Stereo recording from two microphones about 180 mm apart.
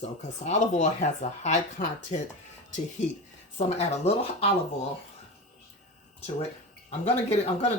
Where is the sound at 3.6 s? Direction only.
35° left (ahead or behind).